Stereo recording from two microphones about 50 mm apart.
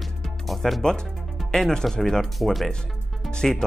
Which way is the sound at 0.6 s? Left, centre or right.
Centre.